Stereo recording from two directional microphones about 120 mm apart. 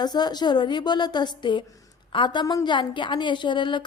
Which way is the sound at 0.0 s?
35° left (ahead or behind).